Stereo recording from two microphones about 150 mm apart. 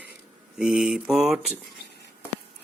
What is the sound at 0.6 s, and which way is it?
Mantra, 5° right (ahead or behind).